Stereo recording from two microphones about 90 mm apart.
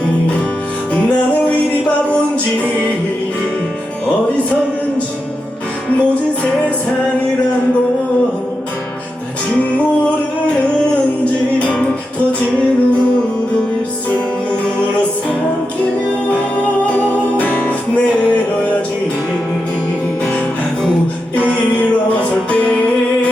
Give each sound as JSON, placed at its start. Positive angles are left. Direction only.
{"t": 0.9, "sound": "music", "side_deg": 15}
{"t": 6.0, "sound": "music", "side_deg": 15}
{"t": 9.6, "sound": "music", "side_deg": 15}
{"t": 17.0, "sound": "music", "side_deg": 20}
{"t": 21.3, "sound": "music", "side_deg": 15}